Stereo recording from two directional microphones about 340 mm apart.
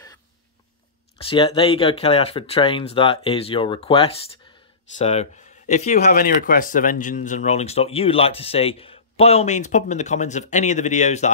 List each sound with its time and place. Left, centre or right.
1.1 s speech: centre